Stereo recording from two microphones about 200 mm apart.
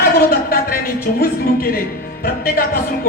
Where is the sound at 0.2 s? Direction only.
45° left (ahead or behind).